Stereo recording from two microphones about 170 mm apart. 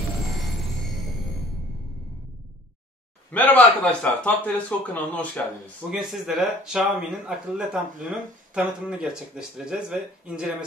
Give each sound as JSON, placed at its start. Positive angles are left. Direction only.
{"t": 3.3, "sound": "a man's voice", "side_deg": 10}